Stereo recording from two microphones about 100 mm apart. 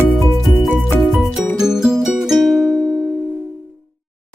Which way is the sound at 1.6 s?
5° right (ahead or behind).